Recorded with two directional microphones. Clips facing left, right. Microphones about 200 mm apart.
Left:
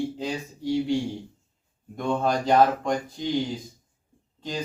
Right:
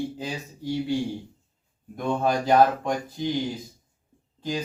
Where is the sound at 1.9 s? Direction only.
5° right (ahead or behind).